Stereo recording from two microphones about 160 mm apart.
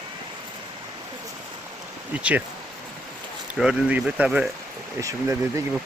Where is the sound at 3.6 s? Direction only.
5° right (ahead or behind).